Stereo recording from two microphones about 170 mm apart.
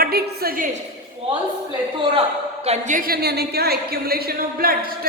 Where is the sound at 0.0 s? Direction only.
65° right (ahead or behind).